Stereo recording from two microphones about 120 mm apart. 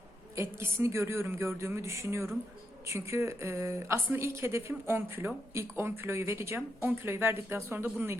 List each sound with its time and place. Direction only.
0.3 s speech: 25° right (ahead or behind)